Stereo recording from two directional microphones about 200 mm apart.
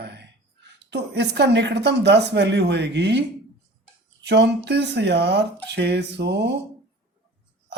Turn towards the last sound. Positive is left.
turn(degrees=-60)  # may be behind; listen again after turning